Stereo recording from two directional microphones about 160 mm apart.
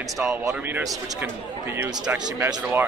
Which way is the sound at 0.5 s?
15° right (ahead or behind).